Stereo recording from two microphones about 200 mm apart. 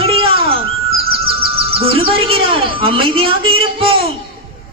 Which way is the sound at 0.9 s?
30° right (ahead or behind).